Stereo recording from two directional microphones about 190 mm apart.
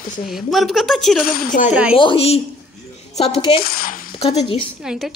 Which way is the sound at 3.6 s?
50° left (ahead or behind).